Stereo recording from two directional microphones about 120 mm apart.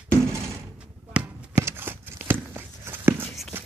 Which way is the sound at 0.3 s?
25° right (ahead or behind).